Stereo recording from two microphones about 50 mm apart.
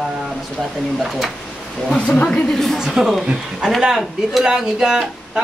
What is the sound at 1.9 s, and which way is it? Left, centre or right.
Speech, left.